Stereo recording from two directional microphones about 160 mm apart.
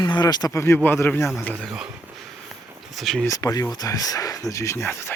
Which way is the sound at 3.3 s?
20° left (ahead or behind).